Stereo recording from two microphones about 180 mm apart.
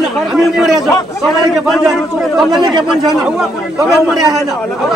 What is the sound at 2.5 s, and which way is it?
Speech, 25° right (ahead or behind).